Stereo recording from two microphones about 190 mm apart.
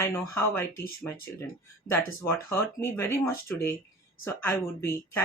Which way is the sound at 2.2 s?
10° left (ahead or behind).